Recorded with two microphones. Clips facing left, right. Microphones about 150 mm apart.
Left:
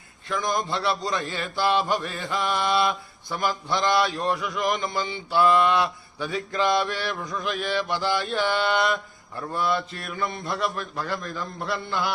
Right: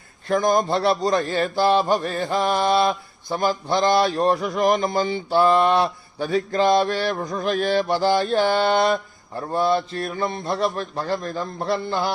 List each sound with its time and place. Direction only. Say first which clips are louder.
0.3 s a man's voice: right 8 dB; 45° right (ahead or behind)
1.3 s mantra: right 3 dB; 35° right (ahead or behind)
11.2 s mantra: right 5 dB; 40° right (ahead or behind)